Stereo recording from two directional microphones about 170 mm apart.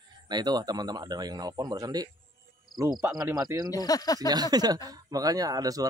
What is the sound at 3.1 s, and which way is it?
Speech, 20° right (ahead or behind).